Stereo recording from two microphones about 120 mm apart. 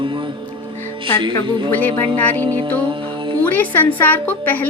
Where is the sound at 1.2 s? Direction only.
40° right (ahead or behind).